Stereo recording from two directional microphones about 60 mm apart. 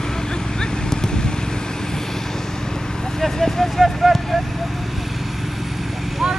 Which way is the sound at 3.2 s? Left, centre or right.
Centre.